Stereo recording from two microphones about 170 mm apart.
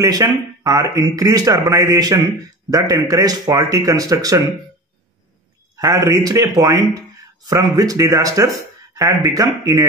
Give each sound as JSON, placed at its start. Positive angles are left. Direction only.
{"t": 0.0, "sound": "speech", "side_deg": -20}
{"t": 5.8, "sound": "speech", "side_deg": -20}